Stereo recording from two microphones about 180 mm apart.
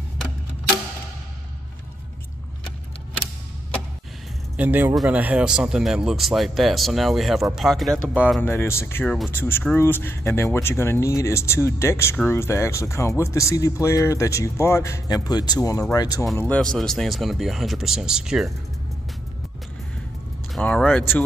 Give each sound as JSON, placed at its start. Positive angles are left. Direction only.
{"t": 4.6, "sound": "speech", "side_deg": -10}
{"t": 16.3, "sound": "speech", "side_deg": 10}
{"t": 20.5, "sound": "speech", "side_deg": 5}